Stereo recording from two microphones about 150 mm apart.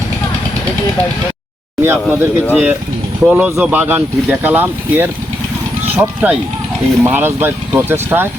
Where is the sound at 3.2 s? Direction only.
10° right (ahead or behind).